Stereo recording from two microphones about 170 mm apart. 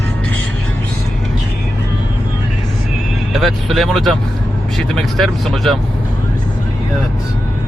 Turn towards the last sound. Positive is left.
turn(degrees=0)  # may be behind; listen again after turning